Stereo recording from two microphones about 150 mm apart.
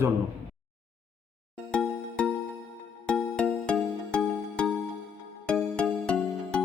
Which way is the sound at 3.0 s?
5° left (ahead or behind).